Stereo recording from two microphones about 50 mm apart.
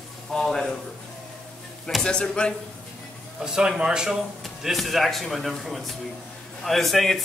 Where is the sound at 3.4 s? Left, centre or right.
Centre.